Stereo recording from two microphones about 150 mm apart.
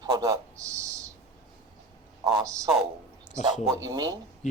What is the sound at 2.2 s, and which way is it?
Speech, 30° right (ahead or behind).